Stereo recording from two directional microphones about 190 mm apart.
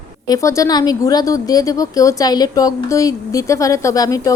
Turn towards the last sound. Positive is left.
turn(degrees=15)  # may be behind; listen again after turning